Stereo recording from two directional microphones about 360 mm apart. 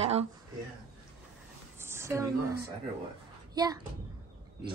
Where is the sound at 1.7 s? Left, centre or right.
Centre.